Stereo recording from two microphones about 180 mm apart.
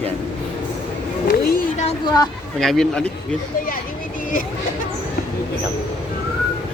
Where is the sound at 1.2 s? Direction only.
55° left (ahead or behind).